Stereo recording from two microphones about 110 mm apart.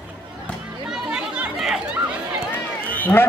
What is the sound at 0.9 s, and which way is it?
Chatter, 5° right (ahead or behind).